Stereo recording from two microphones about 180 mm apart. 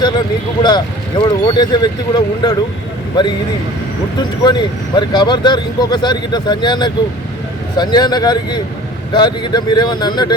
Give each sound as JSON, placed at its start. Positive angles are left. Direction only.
{"t": 1.2, "sound": "speech", "side_deg": 25}